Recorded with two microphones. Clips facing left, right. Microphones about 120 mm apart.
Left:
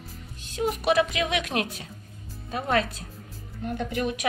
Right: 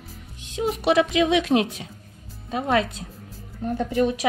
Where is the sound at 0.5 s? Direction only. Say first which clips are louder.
Right 3 dB; 25° right (ahead or behind).